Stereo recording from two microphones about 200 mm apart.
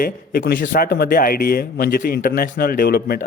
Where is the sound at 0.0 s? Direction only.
50° left (ahead or behind).